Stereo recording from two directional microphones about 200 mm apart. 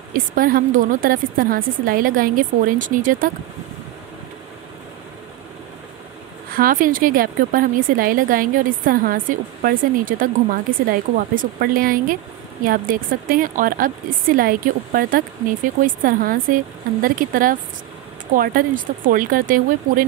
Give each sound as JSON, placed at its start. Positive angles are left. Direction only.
{"t": 0.1, "sound": "a woman's voice", "side_deg": -45}
{"t": 6.5, "sound": "a woman's voice", "side_deg": -45}